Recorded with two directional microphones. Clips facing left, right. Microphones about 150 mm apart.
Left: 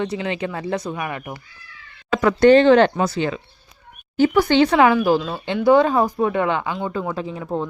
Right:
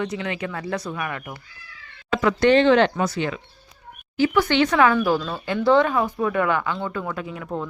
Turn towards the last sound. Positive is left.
turn(degrees=25)  # may be behind; listen again after turning